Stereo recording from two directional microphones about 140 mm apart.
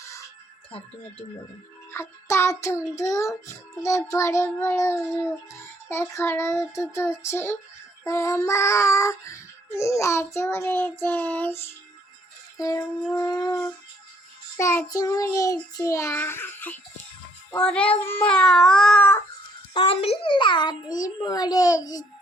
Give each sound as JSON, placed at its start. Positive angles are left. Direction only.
{"t": 1.9, "sound": "music", "side_deg": 20}
{"t": 3.1, "sound": "child singing", "side_deg": 20}
{"t": 12.5, "sound": "music", "side_deg": 25}
{"t": 13.1, "sound": "child singing", "side_deg": 25}
{"t": 17.6, "sound": "speech", "side_deg": 5}
{"t": 19.7, "sound": "child singing", "side_deg": 40}